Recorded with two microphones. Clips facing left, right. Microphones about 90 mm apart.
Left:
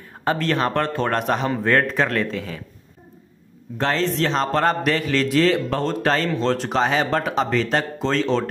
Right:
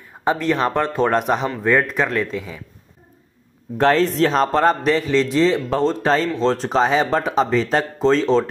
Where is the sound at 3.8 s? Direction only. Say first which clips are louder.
Right 5 dB; 45° right (ahead or behind).